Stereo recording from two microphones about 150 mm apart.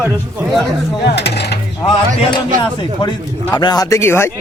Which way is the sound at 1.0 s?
90° left.